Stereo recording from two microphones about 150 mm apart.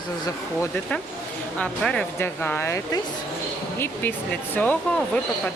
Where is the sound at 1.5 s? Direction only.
5° left (ahead or behind).